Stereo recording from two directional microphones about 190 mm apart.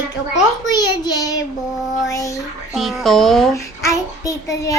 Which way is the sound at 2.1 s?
15° left (ahead or behind).